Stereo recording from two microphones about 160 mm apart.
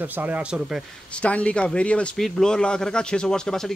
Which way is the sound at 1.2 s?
10° left (ahead or behind).